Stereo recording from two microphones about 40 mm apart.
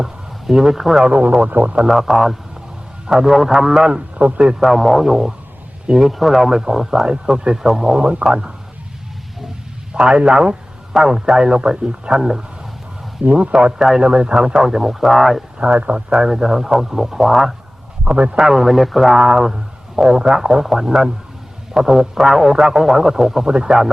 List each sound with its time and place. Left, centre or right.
0.0 s a man's voice: centre
1.0 s a man's voice: right
1.9 s a man's voice: centre
4.2 s a man's voice: right
4.6 s a man's voice: centre
9.9 s a man's voice: right
13.2 s speech: right
13.7 s a man's voice: centre
14.0 s a man's voice: right; by 15.4 s centre
15.5 s speech: right
16.1 s a man's voice: centre
18.0 s speech: right
18.3 s speech: centre
19.1 s a man's voice: centre